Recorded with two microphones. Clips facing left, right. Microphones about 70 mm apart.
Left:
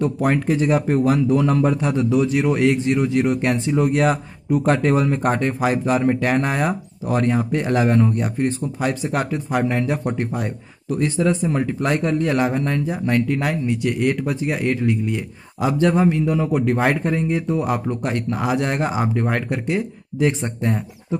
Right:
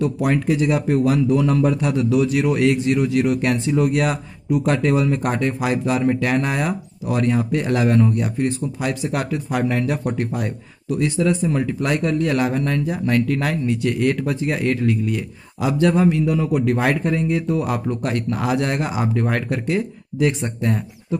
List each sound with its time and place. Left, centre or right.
0.0 s speech: left